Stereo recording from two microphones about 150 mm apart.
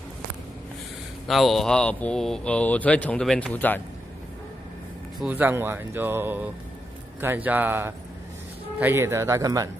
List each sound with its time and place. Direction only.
1.2 s speech: centre (ahead or behind)
5.2 s speech: 10° right (ahead or behind)